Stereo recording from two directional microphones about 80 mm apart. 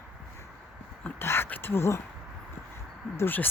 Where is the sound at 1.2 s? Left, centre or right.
Left.